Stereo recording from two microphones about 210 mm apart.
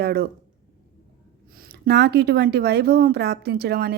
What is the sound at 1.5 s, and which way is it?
Speech, 45° right (ahead or behind).